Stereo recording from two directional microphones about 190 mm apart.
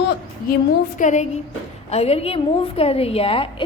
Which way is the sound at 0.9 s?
40° left (ahead or behind).